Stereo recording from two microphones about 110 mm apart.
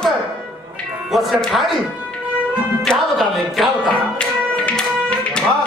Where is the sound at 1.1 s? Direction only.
Centre (ahead or behind).